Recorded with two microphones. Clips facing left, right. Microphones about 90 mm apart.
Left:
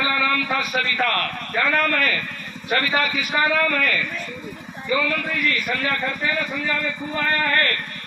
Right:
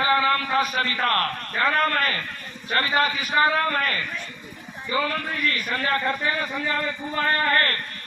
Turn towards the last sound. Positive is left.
turn(degrees=-35)  # may be behind; listen again after turning